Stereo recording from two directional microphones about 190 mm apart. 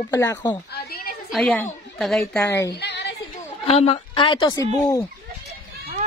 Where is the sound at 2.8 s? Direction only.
65° left (ahead or behind).